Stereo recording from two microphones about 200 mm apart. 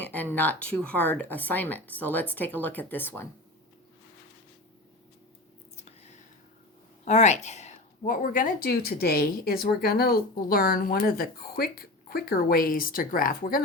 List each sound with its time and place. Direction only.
0.1 s a woman's voice: 10° left (ahead or behind)
5.7 s whispering: 35° left (ahead or behind)
7.0 s a woman's voice: 35° left (ahead or behind)